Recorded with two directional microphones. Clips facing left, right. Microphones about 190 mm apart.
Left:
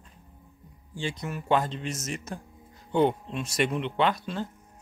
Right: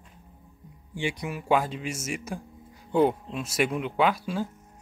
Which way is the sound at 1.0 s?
15° right (ahead or behind).